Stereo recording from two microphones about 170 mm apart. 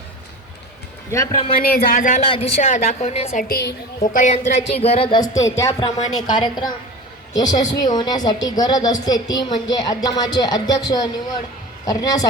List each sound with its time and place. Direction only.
1.1 s a woman's voice: 20° left (ahead or behind)
1.5 s speech: 60° left (ahead or behind)
2.2 s a woman's voice: 35° left (ahead or behind)
3.5 s a woman's voice: 75° left (ahead or behind)
4.0 s a woman's voice: 50° left (ahead or behind); by 12.2 s 20° left (ahead or behind)